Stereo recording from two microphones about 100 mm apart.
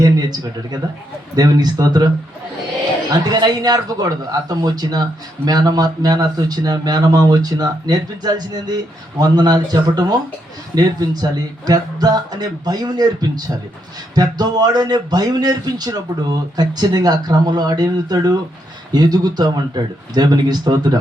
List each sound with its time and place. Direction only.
0.0 s a sound: 40° right (ahead or behind)
1.4 s speech: 45° right (ahead or behind)
3.1 s speech: 45° right (ahead or behind)